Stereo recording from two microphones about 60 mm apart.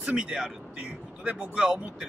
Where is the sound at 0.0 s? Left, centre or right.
Centre.